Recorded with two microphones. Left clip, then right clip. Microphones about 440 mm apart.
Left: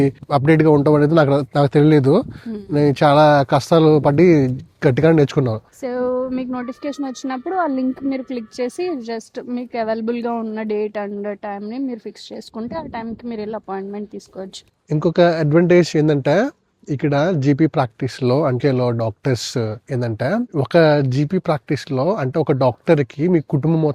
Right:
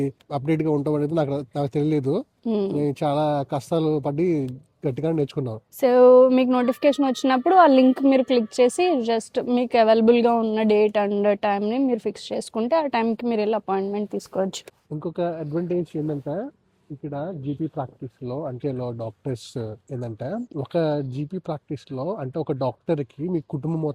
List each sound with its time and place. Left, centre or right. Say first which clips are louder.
0.0 s speech: left 10 dB; left
5.8 s a woman's voice: right 9 dB; right
14.8 s speech: left 12 dB; left
17.4 s speech: left 12 dB; left